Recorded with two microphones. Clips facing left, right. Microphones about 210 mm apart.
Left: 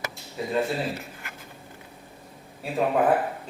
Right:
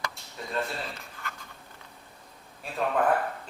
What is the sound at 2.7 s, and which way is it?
Speech, 15° left (ahead or behind).